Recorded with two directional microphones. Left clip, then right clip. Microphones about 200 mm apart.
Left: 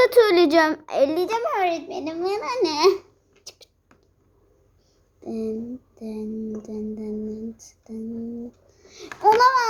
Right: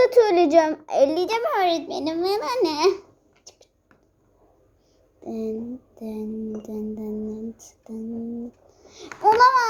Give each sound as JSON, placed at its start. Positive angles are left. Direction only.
{"t": 0.0, "sound": "a child's voice", "side_deg": 10}
{"t": 1.4, "sound": "a child's voice", "side_deg": -20}
{"t": 2.6, "sound": "speech", "side_deg": 0}
{"t": 3.5, "sound": "a sound", "side_deg": 20}
{"t": 5.2, "sound": "a child's voice", "side_deg": 5}